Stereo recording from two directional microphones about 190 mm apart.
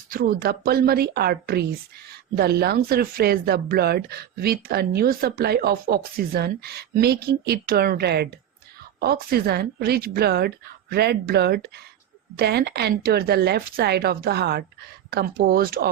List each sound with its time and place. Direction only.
0.1 s a woman's voice: 50° right (ahead or behind)